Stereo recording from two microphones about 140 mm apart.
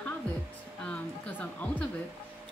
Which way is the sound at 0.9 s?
10° left (ahead or behind).